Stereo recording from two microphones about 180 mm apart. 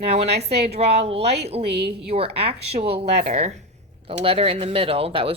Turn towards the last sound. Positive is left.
turn(degrees=-30)  # may be behind; listen again after turning